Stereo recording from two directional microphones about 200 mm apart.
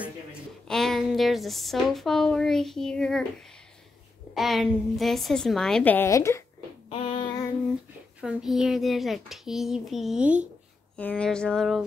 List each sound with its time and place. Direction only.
0.0 s speech: centre (ahead or behind)
4.3 s a child's voice: centre (ahead or behind)
6.9 s female singing: 30° left (ahead or behind)
8.2 s a child's voice: 5° right (ahead or behind)
11.0 s a child's voice: 5° left (ahead or behind)